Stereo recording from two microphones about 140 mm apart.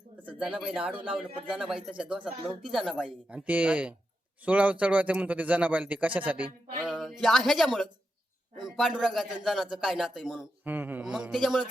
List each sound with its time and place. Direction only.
0.2 s speech: 10° right (ahead or behind)
3.3 s a man's voice: 10° right (ahead or behind)
10.6 s a man's voice: 15° right (ahead or behind)